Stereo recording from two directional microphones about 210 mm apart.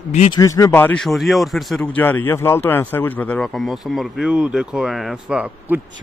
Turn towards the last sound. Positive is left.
turn(degrees=-5)  # may be behind; listen again after turning